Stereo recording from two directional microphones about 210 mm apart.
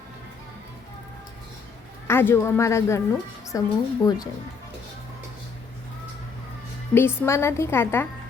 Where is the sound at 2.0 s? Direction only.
10° left (ahead or behind).